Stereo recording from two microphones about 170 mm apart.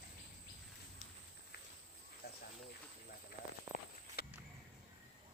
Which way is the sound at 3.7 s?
55° left (ahead or behind).